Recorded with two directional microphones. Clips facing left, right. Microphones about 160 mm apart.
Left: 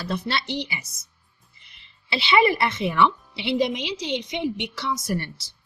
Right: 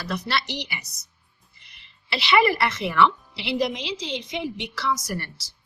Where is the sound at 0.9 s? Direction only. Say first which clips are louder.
Even; 65° right (ahead or behind).